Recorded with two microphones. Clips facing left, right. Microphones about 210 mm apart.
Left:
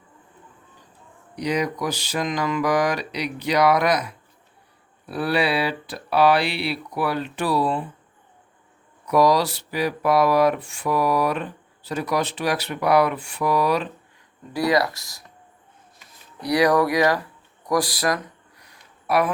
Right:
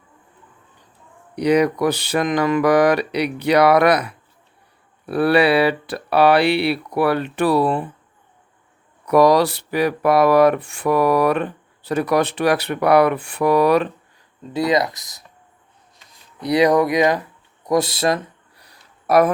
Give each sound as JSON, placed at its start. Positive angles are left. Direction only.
{"t": 1.4, "sound": "speech", "side_deg": -60}
{"t": 9.0, "sound": "speech", "side_deg": -60}
{"t": 14.5, "sound": "speech", "side_deg": -20}
{"t": 16.4, "sound": "a sound", "side_deg": -20}